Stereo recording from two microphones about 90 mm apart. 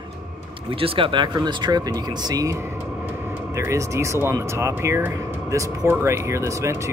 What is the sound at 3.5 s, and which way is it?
Speech, 35° right (ahead or behind).